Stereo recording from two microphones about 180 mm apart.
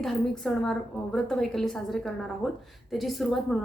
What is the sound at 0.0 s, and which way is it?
A woman's voice, centre (ahead or behind).